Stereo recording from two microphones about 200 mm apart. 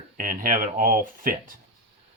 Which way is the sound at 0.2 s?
45° right (ahead or behind).